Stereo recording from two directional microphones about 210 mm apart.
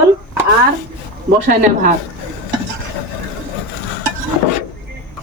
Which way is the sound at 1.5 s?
40° right (ahead or behind).